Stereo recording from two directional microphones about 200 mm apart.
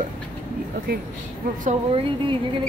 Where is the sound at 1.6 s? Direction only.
35° right (ahead or behind).